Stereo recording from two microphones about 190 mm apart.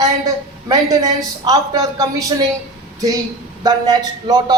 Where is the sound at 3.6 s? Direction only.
20° right (ahead or behind).